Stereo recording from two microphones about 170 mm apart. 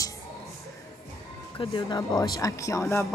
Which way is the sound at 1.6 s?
30° left (ahead or behind).